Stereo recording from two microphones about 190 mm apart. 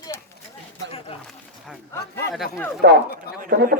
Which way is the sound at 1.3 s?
Centre (ahead or behind).